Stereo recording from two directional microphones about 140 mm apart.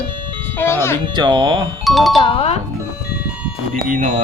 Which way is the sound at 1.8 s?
Centre (ahead or behind).